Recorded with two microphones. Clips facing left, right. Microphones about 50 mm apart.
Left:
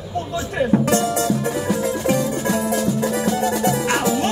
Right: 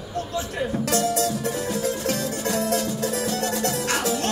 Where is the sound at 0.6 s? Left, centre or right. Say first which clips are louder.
Left 7 dB; left; by 2.9 s centre.